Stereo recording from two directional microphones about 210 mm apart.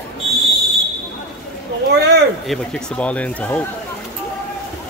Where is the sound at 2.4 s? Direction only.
Centre (ahead or behind).